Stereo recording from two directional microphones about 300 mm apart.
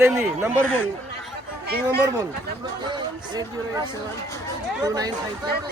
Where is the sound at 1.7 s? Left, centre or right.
Right.